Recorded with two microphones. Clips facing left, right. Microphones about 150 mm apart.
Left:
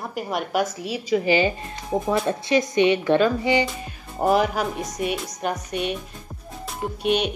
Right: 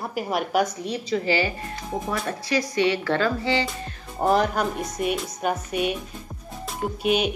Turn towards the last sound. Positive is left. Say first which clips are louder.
# even
turn(degrees=-5)  # may be behind; listen again after turning